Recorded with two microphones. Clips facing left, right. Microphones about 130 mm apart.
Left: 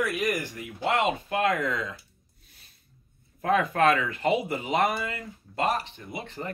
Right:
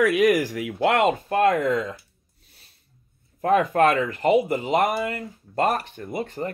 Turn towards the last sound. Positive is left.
turn(degrees=-45)  # may be behind; listen again after turning